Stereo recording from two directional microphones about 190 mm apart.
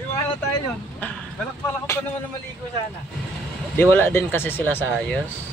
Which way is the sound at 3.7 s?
10° left (ahead or behind).